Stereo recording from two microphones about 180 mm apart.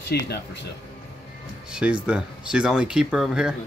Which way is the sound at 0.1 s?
65° left (ahead or behind).